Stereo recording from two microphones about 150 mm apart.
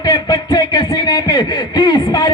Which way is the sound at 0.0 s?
25° left (ahead or behind).